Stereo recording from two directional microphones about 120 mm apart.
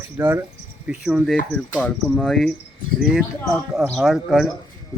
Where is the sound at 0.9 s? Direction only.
5° right (ahead or behind).